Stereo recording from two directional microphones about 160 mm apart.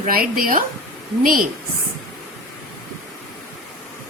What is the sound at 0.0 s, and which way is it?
Speech, 65° right (ahead or behind).